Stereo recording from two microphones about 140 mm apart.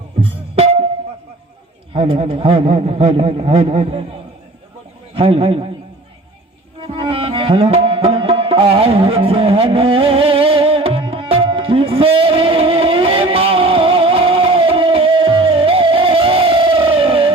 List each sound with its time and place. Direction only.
0.2 s music: 45° right (ahead or behind)
1.9 s a man's voice: 45° right (ahead or behind)
5.1 s a man's voice: 45° right (ahead or behind)
6.7 s music: 40° right (ahead or behind)